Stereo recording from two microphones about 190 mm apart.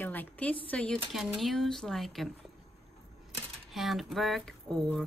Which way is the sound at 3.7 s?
Centre (ahead or behind).